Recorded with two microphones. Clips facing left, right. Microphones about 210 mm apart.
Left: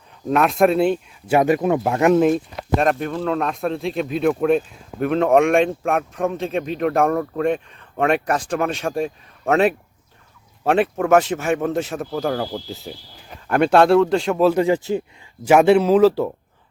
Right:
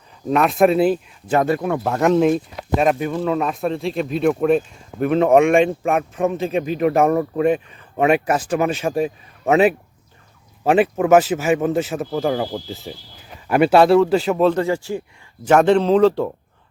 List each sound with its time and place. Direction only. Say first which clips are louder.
0.3 s speech: right 1 dB; centre (ahead or behind)
1.3 s speech: left 2 dB; 15° left (ahead or behind)
1.9 s speech: right 1 dB; 5° left (ahead or behind)
14.5 s speech: left 3 dB; 15° left (ahead or behind)
15.4 s speech: left 1 dB; 10° left (ahead or behind)